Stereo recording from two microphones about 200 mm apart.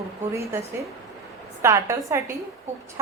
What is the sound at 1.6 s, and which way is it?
Speech, 15° right (ahead or behind).